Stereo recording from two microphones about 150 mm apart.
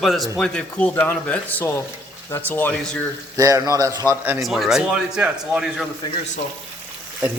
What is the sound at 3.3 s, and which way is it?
A man's voice, 25° right (ahead or behind).